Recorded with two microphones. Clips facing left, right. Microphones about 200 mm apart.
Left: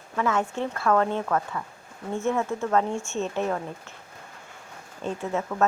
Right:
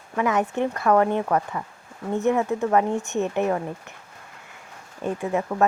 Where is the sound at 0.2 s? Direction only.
15° right (ahead or behind).